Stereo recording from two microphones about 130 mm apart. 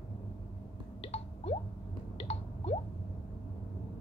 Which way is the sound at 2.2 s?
50° left (ahead or behind).